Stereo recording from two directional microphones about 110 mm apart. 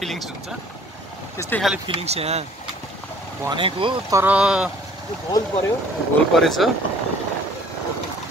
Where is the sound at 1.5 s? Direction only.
15° left (ahead or behind).